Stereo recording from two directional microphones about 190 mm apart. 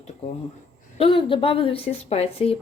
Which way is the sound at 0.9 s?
30° left (ahead or behind).